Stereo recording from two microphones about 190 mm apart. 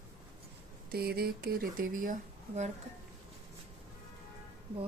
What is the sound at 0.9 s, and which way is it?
Speech, 55° right (ahead or behind).